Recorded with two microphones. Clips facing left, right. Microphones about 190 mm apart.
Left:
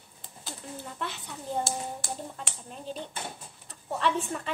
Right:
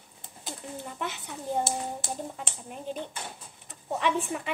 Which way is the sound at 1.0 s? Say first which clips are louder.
Right 2 dB; 15° right (ahead or behind).